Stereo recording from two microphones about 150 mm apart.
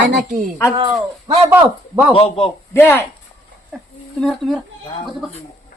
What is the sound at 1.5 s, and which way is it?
Speech, 15° right (ahead or behind).